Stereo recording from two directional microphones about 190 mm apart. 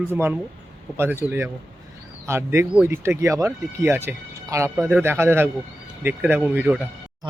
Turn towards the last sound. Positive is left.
turn(degrees=-5)  # may be behind; listen again after turning